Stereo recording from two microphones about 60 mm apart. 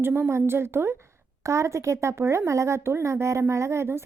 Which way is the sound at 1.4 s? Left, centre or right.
Right.